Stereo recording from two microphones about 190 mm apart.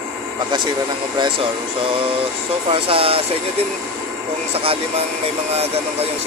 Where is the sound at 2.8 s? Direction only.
30° right (ahead or behind).